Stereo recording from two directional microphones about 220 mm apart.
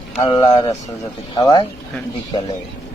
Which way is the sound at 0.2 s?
20° left (ahead or behind).